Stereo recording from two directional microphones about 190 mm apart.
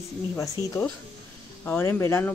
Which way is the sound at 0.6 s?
15° right (ahead or behind).